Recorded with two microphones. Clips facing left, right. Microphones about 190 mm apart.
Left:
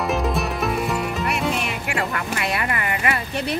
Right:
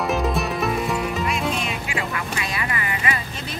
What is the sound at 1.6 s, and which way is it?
Music, 65° left (ahead or behind).